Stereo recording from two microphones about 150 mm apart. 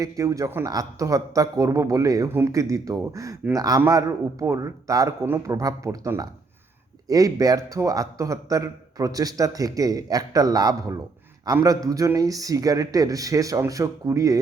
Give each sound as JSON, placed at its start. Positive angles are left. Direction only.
{"t": 0.0, "sound": "a man's voice", "side_deg": -20}